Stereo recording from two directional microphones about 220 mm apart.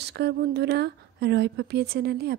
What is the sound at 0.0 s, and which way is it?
Speech, 50° right (ahead or behind).